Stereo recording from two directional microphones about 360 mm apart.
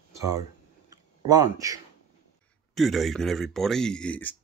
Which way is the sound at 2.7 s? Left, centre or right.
Centre.